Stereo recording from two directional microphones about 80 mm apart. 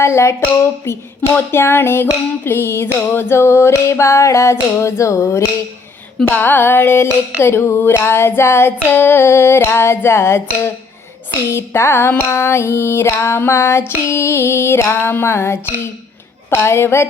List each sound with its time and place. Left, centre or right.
0.0 s female singing: left
6.2 s music: left
7.4 s female singing: left